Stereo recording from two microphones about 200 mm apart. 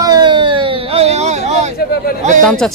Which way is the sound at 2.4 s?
5° left (ahead or behind).